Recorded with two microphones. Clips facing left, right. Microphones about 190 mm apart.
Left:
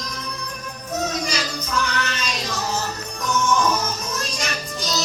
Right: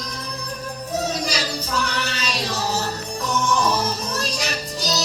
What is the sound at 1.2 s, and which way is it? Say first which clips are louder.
Music: right 1 dB; 35° right (ahead or behind).